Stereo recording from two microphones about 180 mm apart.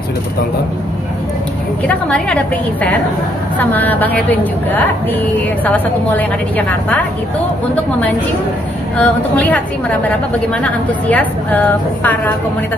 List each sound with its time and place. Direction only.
1.9 s a woman's voice: 5° left (ahead or behind)
8.9 s a woman's voice: 10° left (ahead or behind)